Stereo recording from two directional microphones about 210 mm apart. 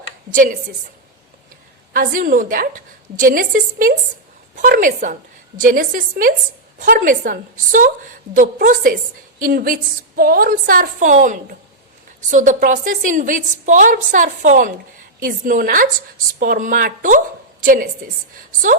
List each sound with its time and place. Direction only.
0.3 s a woman's voice: 40° right (ahead or behind)
1.9 s a woman's voice: 40° right (ahead or behind)